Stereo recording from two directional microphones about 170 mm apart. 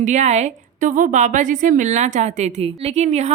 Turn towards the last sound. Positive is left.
turn(degrees=-40)  # may be behind; listen again after turning